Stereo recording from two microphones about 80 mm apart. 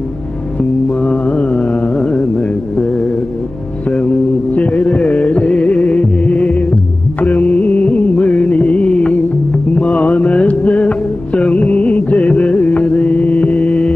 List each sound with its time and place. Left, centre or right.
0.8 s mantra: centre
2.0 s a sound: centre
3.8 s music: centre